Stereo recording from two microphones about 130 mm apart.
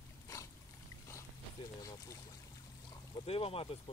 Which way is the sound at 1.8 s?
25° left (ahead or behind).